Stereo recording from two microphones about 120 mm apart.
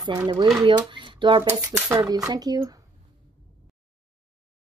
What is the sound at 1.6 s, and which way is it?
Speech, 25° right (ahead or behind).